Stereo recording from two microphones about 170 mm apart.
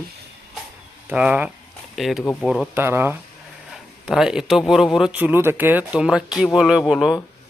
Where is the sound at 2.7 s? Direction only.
15° right (ahead or behind).